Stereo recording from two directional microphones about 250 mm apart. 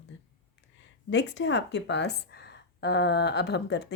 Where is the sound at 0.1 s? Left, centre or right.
Left.